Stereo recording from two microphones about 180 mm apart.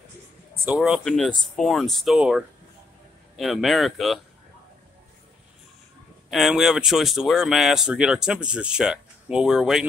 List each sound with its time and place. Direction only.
0.7 s speech: 5° right (ahead or behind)
6.3 s speech: centre (ahead or behind)